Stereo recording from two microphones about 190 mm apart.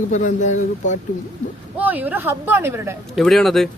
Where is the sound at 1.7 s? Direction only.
10° right (ahead or behind).